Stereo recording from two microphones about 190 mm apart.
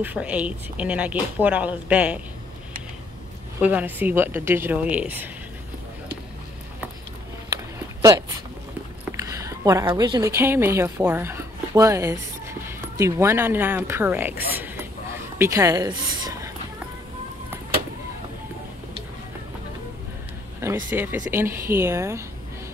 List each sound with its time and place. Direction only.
0.0 s speech: 5° right (ahead or behind)
3.6 s speech: 10° right (ahead or behind)
7.4 s a sound: 15° right (ahead or behind)
9.1 s a woman's voice: 15° right (ahead or behind)
14.5 s mechanisms: 10° right (ahead or behind)
15.3 s a woman's voice: 15° right (ahead or behind)
20.6 s speech: 10° right (ahead or behind)